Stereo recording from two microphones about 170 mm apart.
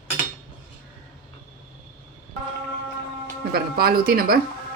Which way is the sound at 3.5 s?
65° right (ahead or behind).